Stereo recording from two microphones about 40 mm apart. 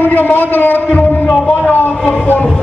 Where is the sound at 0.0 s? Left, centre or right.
Left.